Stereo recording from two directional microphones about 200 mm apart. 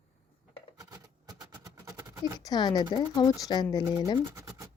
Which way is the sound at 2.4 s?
20° left (ahead or behind).